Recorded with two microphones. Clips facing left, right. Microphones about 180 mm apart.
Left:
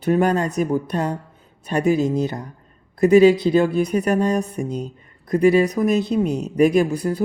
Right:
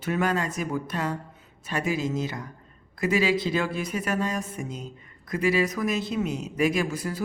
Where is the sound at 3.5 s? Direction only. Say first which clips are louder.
Left 10 dB; 45° left (ahead or behind).